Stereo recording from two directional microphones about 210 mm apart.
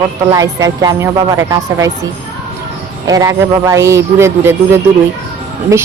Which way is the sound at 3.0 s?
15° right (ahead or behind).